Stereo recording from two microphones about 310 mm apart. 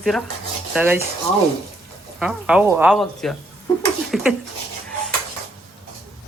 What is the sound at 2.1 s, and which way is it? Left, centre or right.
Speech, centre.